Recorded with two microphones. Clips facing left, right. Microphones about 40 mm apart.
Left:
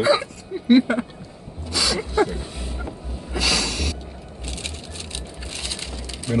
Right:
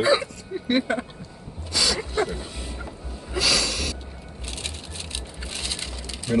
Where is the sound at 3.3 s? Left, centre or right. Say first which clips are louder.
Even; centre.